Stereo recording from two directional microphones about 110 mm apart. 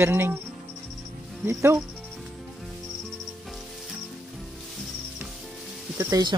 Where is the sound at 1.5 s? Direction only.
25° right (ahead or behind).